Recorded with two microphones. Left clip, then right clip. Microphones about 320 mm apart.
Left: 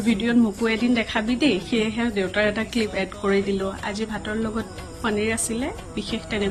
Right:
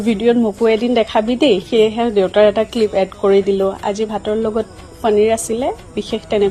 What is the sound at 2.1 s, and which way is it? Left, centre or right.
Speech, right.